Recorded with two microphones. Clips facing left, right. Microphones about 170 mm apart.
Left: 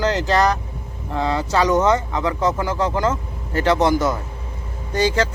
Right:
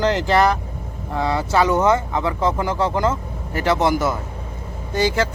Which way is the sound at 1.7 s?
10° right (ahead or behind).